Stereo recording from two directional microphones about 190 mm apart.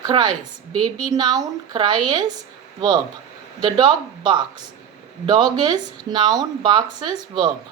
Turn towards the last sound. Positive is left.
turn(degrees=-25)  # may be behind; listen again after turning